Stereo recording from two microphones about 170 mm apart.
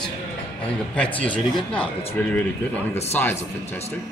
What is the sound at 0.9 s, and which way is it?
Speech, 10° left (ahead or behind).